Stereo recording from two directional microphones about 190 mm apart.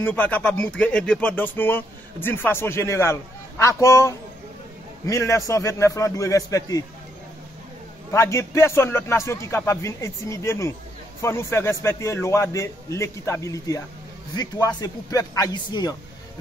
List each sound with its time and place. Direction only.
0.0 s a man's voice: 10° left (ahead or behind)
8.1 s a man's voice: 15° left (ahead or behind)